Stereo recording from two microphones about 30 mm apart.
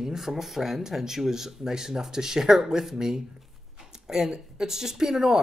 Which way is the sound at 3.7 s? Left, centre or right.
Centre.